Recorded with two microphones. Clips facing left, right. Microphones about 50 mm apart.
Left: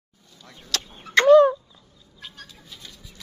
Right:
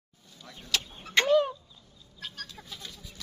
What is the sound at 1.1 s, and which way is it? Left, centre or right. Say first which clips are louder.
Fowl: left 10 dB; left.